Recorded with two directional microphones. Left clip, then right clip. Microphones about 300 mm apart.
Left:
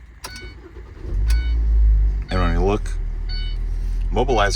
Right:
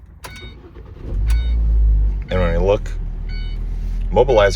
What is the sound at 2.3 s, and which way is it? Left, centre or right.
Music, centre.